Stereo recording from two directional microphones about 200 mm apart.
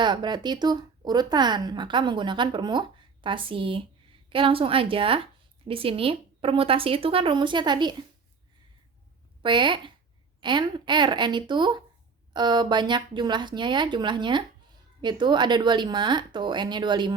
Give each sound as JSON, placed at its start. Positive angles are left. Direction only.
{"t": 0.0, "sound": "a woman's voice", "side_deg": -20}
{"t": 9.4, "sound": "a woman's voice", "side_deg": -25}